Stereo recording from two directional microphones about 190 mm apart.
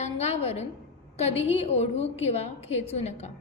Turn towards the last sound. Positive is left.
turn(degrees=35)  # may be behind; listen again after turning